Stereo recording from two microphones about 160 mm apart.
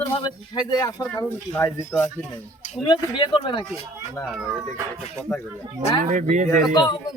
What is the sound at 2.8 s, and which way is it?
Speech, 30° left (ahead or behind).